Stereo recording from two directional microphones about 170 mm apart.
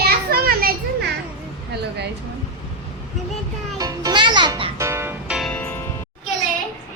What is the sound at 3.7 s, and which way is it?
Music, 20° right (ahead or behind).